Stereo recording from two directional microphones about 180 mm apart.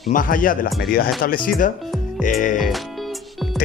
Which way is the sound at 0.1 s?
50° left (ahead or behind).